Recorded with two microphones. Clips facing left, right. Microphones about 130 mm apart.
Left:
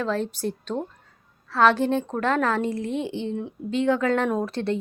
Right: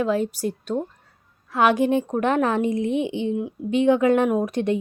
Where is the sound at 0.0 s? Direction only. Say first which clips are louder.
Right 4 dB; 10° right (ahead or behind).